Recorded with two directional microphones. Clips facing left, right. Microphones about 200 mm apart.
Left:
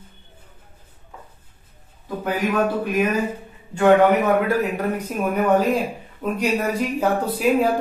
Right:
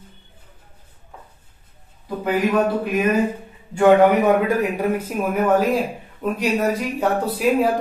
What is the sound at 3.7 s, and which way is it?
Speech, 15° right (ahead or behind).